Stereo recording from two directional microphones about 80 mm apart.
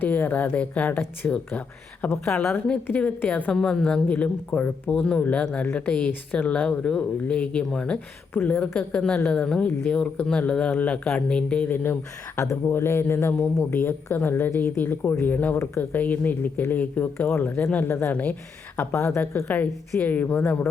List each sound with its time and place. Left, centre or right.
0.0 s speech: left
3.5 s speech: centre
8.3 s speech: left
8.9 s speech: centre
12.4 s speech: left
15.5 s speech: left
15.8 s speech: left
18.9 s speech: left
19.5 s speech: centre